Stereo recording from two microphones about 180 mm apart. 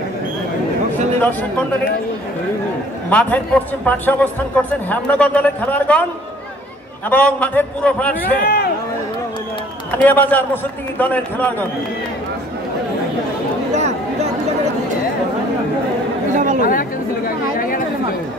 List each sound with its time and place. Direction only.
3.1 s a man's voice: 10° left (ahead or behind)
7.1 s a man's voice: 5° left (ahead or behind)
8.2 s speech: 55° left (ahead or behind)
9.8 s a man's voice: 10° left (ahead or behind)
13.7 s a sound: 40° right (ahead or behind)
16.3 s chatter: 45° right (ahead or behind)